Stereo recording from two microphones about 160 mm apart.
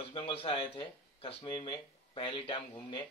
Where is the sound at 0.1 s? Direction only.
35° left (ahead or behind).